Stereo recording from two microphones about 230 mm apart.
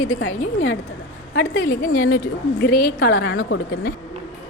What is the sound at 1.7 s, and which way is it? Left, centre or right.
Speech, left.